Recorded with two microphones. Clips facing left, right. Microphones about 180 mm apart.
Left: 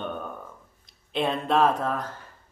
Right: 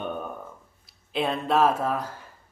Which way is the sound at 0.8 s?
Centre (ahead or behind).